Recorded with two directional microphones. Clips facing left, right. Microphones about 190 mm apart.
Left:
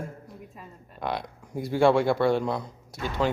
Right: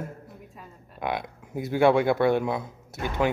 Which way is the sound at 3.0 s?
55° right (ahead or behind).